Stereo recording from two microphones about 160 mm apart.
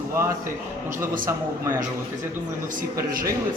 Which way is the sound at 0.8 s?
15° right (ahead or behind).